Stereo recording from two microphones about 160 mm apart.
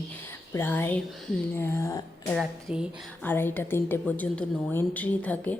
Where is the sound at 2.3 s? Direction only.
5° right (ahead or behind).